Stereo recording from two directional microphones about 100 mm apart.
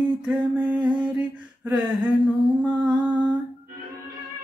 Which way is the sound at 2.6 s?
10° right (ahead or behind).